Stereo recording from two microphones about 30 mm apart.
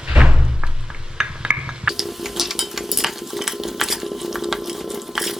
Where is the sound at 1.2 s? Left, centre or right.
Centre.